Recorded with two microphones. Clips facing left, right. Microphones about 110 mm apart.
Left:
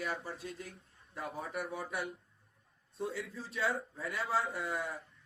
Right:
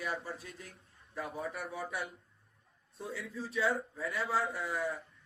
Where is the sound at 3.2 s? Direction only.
30° left (ahead or behind).